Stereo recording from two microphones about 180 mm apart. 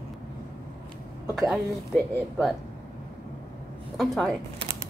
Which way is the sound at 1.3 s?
Centre (ahead or behind).